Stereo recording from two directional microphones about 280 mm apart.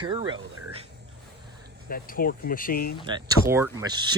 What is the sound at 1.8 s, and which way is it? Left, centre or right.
Speech, left.